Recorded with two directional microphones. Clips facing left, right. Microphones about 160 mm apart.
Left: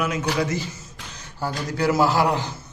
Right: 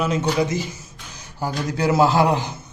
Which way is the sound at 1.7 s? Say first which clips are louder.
Right 2 dB; 20° right (ahead or behind).